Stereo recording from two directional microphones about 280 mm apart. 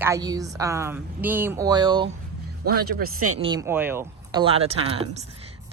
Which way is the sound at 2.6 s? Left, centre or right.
Right.